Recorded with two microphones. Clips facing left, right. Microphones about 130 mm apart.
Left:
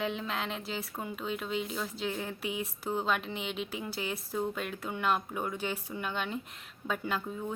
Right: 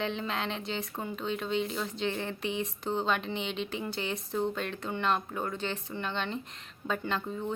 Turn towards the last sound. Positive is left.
turn(degrees=5)  # may be behind; listen again after turning